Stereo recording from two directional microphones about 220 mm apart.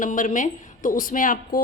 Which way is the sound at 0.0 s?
35° left (ahead or behind).